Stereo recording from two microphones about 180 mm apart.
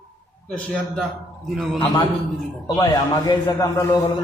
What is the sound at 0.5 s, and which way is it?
Speech, 5° left (ahead or behind).